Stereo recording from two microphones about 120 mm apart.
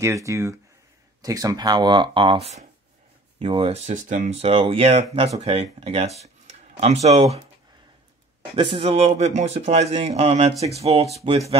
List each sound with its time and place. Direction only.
0.0 s speech: 25° right (ahead or behind); by 2.6 s 60° right (ahead or behind)
3.3 s speech: 45° right (ahead or behind)
3.7 s speech: 85° right
4.5 s a man's voice: 55° right (ahead or behind)
8.5 s a man's voice: 45° right (ahead or behind); by 11.1 s 60° right (ahead or behind)